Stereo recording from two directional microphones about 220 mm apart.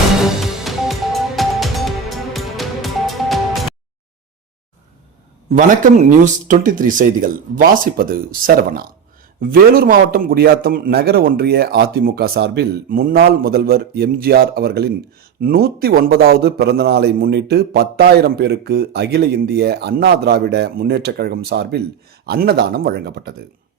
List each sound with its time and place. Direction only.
0.2 s music: centre (ahead or behind)
5.5 s a man's voice: 35° right (ahead or behind)